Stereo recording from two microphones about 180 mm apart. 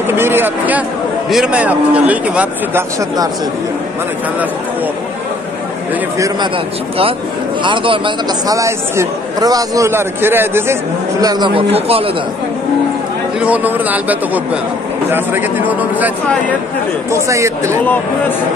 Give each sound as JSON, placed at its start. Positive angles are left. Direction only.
{"t": 0.1, "sound": "a man's voice", "side_deg": -10}
{"t": 6.1, "sound": "a man's voice", "side_deg": -20}
{"t": 7.6, "sound": "speech", "side_deg": -30}
{"t": 13.4, "sound": "a man's voice", "side_deg": -10}
{"t": 17.3, "sound": "a man's voice", "side_deg": -15}